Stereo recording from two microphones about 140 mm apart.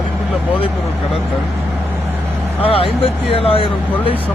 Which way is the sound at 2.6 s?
40° left (ahead or behind).